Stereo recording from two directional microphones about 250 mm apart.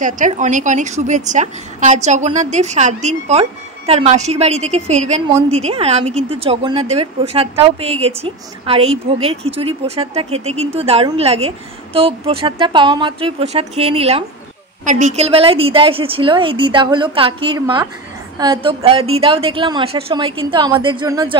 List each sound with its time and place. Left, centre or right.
0.0 s a woman's voice: right